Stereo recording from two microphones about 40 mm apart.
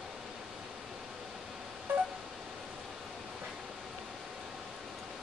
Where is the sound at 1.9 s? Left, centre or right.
Right.